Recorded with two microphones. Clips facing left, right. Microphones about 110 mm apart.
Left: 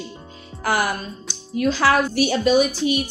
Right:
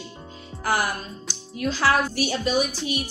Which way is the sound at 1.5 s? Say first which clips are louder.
Left 4 dB; 90° left.